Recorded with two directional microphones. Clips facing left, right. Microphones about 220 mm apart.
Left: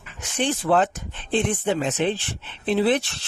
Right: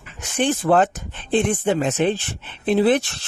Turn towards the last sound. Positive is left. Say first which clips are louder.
# right 3 dB
turn(degrees=-50)  # may be behind; listen again after turning